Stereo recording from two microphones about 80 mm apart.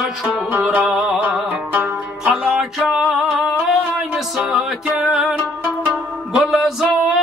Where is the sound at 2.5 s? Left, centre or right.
Centre.